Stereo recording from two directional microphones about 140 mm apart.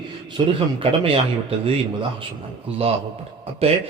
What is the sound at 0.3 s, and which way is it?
A man's voice, 40° right (ahead or behind).